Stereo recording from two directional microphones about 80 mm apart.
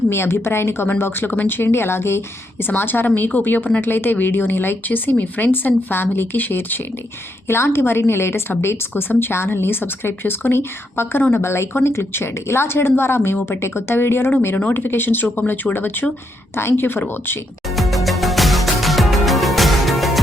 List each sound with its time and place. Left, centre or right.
0.1 s a woman's voice: left
17.7 s music: centre